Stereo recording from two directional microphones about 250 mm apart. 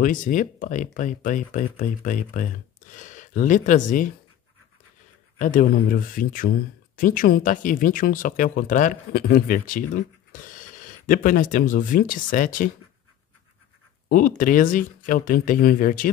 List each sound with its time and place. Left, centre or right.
0.0 s speech: left
5.4 s speech: left
14.0 s speech: left